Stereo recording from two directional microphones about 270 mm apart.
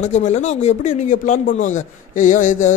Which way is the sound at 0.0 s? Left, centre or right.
Left.